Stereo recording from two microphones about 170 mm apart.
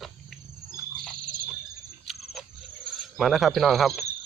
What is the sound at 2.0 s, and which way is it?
Cricket, centre (ahead or behind).